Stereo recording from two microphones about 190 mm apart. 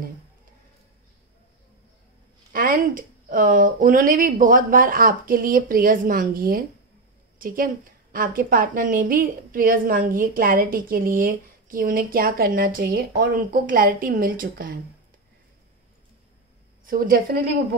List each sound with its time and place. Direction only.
2.5 s a woman's voice: 45° right (ahead or behind)
16.8 s a woman's voice: 45° right (ahead or behind)